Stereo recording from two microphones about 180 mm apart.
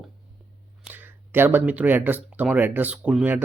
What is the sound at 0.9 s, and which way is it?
Speech, 10° right (ahead or behind).